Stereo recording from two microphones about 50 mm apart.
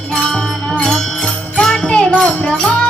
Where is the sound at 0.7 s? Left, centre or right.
Centre.